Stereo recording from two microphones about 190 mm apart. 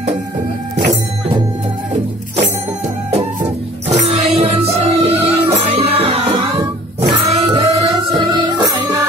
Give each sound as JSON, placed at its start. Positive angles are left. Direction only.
{"t": 4.0, "sound": "music", "side_deg": -30}